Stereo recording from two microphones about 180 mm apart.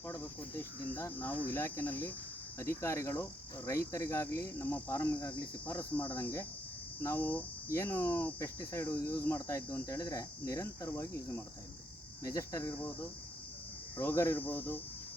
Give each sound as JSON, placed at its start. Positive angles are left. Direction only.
{"t": 0.1, "sound": "cricket", "side_deg": 15}
{"t": 12.2, "sound": "cricket", "side_deg": 20}
{"t": 14.0, "sound": "cricket", "side_deg": 10}